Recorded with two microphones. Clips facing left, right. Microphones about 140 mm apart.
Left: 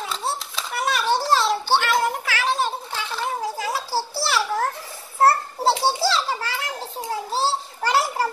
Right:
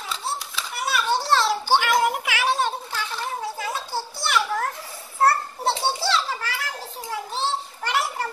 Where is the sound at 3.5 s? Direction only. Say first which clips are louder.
Left 3 dB; 35° left (ahead or behind).